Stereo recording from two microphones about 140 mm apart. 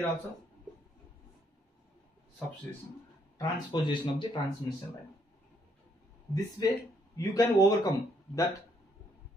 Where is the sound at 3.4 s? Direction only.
30° left (ahead or behind).